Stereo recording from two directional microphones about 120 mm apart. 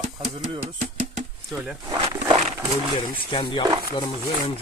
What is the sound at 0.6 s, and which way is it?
Music, 85° right.